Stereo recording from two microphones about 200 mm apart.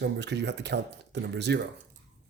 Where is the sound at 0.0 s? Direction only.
60° right (ahead or behind).